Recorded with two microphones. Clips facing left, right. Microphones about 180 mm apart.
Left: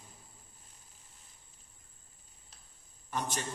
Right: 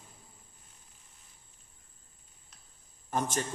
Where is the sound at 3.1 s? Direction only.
45° right (ahead or behind).